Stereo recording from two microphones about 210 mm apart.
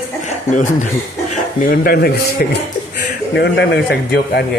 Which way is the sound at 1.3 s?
45° left (ahead or behind).